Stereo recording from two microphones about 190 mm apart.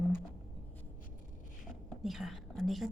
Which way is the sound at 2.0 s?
Centre (ahead or behind).